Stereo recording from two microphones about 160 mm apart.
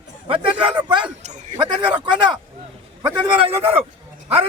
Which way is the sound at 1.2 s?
45° right (ahead or behind).